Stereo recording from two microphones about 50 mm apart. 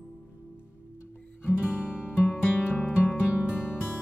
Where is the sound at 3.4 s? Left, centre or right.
Centre.